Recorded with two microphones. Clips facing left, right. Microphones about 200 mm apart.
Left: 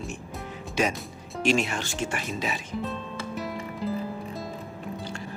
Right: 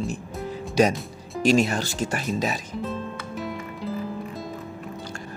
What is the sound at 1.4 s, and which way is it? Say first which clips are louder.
Speech: right 5 dB; 40° right (ahead or behind).